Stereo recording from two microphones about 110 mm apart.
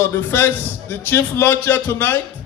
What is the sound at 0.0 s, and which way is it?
A man's voice, 20° left (ahead or behind).